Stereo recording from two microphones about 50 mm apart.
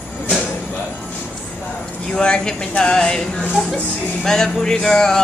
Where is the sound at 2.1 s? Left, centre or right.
Centre.